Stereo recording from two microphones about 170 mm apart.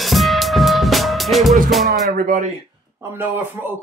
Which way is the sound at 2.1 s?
60° right (ahead or behind).